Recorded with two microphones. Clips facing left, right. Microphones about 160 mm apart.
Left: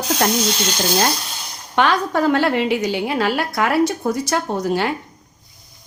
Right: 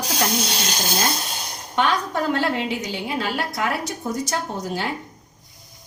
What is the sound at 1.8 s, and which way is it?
A woman's voice, 75° left (ahead or behind).